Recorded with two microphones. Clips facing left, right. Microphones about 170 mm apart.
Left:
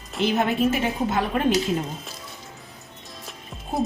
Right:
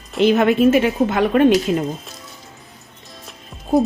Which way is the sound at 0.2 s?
80° right.